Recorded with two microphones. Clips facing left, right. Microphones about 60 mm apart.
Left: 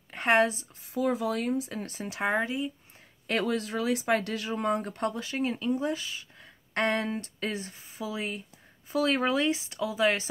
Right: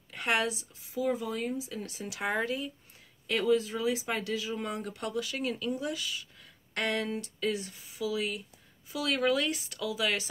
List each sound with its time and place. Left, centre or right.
0.1 s speech: left
0.8 s speech: left
2.4 s speech: centre
3.3 s speech: left